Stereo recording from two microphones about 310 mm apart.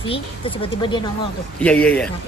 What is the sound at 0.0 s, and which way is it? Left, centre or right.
Speech, centre.